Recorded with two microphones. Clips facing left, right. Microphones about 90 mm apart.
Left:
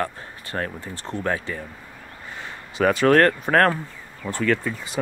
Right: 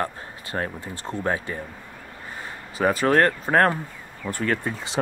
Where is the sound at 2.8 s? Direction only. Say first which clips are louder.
Left 3 dB; 20° right (ahead or behind).